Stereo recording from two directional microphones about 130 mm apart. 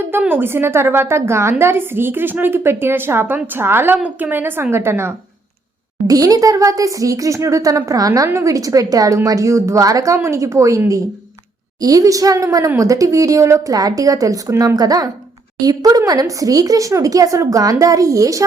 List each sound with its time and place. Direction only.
0.1 s a woman's voice: 15° right (ahead or behind)